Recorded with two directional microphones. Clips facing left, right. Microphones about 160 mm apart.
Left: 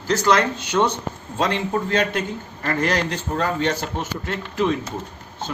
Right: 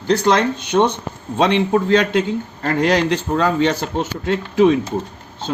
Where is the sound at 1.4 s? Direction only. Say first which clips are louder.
Right 6 dB; 70° right (ahead or behind).